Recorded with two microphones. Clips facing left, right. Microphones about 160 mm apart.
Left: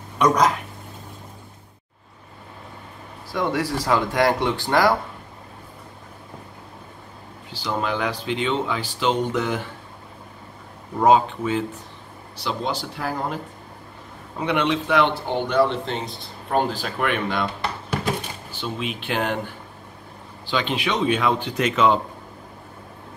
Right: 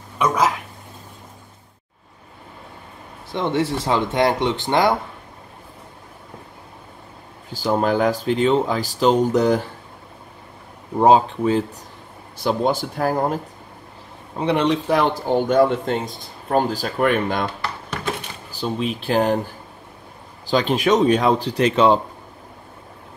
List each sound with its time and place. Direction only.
0.2 s speech: 5° right (ahead or behind)
3.3 s speech: 25° right (ahead or behind)
7.5 s speech: 45° right (ahead or behind)
11.0 s speech: 35° right (ahead or behind)
12.4 s speech: 50° right (ahead or behind)
14.3 s speech: 35° right (ahead or behind)
18.5 s speech: 35° right (ahead or behind)